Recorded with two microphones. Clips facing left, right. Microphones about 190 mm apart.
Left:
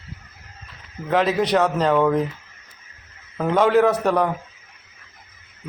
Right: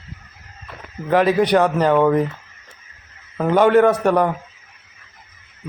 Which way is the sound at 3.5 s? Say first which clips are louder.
Right 3 dB; centre (ahead or behind).